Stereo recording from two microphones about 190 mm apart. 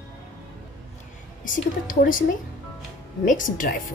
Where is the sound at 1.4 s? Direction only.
45° left (ahead or behind).